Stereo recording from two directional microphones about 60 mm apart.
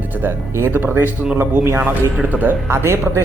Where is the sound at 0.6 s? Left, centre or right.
Right.